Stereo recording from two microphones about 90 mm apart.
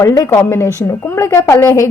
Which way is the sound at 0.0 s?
40° left (ahead or behind).